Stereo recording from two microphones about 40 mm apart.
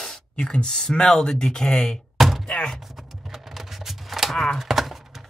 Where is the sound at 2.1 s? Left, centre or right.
Centre.